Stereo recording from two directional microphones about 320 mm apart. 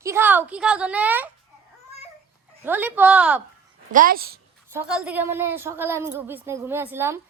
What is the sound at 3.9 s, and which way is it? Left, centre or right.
Speech, right.